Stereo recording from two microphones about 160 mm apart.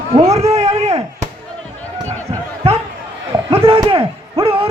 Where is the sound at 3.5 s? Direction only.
35° right (ahead or behind).